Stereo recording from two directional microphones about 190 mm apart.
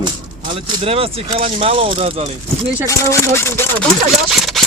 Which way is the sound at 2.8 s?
15° left (ahead or behind).